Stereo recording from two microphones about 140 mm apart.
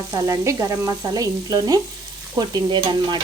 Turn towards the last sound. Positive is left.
turn(degrees=-30)  # may be behind; listen again after turning